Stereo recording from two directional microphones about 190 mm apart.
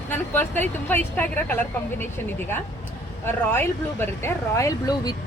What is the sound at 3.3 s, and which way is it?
Speech, 10° left (ahead or behind).